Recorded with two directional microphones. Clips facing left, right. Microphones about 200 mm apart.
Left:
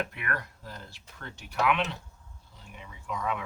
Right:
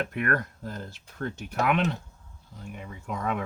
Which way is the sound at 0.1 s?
50° right (ahead or behind).